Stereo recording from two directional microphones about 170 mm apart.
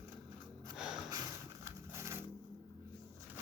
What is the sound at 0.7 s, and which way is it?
Snort, 5° right (ahead or behind).